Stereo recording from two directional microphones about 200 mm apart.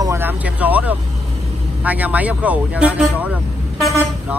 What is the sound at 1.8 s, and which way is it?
Speech, 10° right (ahead or behind).